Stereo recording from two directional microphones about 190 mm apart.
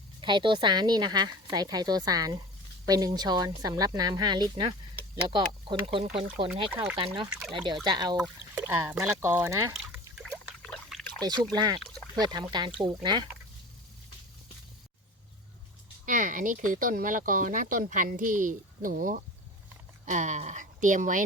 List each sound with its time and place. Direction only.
0.2 s a woman's voice: 25° right (ahead or behind)
6.7 s speech: 10° right (ahead or behind)
7.5 s a woman's voice: 25° right (ahead or behind)
8.2 s speech: 10° right (ahead or behind)
10.2 s trickle: 5° left (ahead or behind)
11.2 s a woman's voice: 20° right (ahead or behind)
11.8 s a sound: 5° left (ahead or behind)
12.2 s a woman's voice: 20° right (ahead or behind)
16.0 s a woman's voice: 40° right (ahead or behind)